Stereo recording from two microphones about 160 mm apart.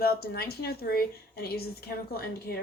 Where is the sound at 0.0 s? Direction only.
75° left (ahead or behind).